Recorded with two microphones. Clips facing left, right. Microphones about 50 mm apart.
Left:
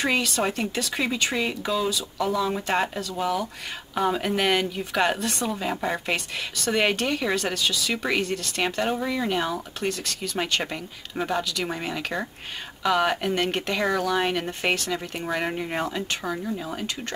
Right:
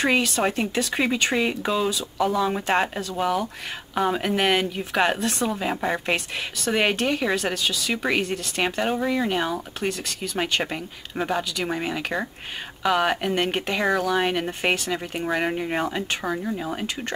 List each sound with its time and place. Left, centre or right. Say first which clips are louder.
0.0 s speech: right 3 dB; centre
5.5 s speech: right 2 dB; centre